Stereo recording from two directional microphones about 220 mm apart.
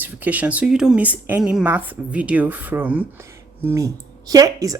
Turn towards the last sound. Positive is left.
turn(degrees=-15)  # may be behind; listen again after turning